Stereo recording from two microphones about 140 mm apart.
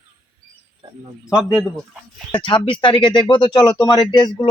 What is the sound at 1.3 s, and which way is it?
Speech, centre (ahead or behind).